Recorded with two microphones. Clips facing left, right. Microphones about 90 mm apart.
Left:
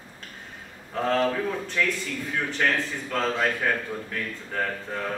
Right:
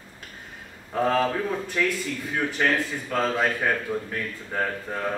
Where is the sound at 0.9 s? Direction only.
10° right (ahead or behind).